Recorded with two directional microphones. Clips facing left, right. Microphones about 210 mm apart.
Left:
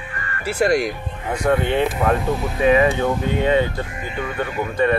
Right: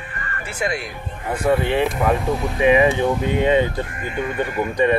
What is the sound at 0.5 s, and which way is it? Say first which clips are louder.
Speech: left 8 dB; 40° left (ahead or behind).